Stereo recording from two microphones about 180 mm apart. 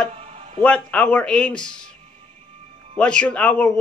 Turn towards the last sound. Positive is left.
turn(degrees=5)  # may be behind; listen again after turning